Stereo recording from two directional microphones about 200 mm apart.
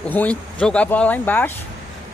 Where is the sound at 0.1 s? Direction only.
5° left (ahead or behind).